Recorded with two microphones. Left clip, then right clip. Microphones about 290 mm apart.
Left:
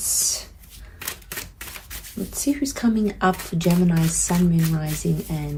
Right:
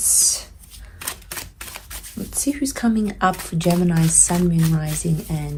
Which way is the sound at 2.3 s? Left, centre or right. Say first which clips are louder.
Right 1 dB; right.